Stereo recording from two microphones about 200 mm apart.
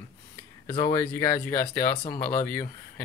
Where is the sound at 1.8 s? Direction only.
50° left (ahead or behind).